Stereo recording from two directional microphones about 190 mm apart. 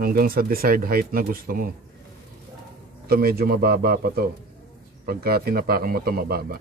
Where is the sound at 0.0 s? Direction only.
50° right (ahead or behind).